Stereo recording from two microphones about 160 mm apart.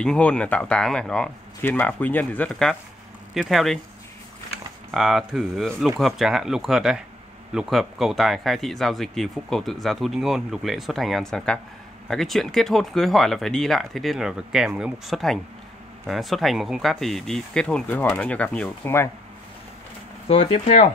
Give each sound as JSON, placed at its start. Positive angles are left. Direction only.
{"t": 0.0, "sound": "speech", "side_deg": 5}
{"t": 4.9, "sound": "speech", "side_deg": 0}
{"t": 20.2, "sound": "speech", "side_deg": 40}